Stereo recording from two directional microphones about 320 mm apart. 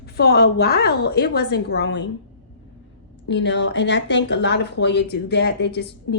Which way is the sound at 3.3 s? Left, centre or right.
Left.